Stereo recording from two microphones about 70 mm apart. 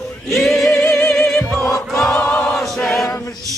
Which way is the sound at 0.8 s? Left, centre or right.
Left.